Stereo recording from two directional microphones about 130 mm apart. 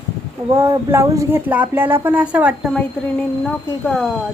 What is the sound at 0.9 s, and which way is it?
Speech, 20° right (ahead or behind).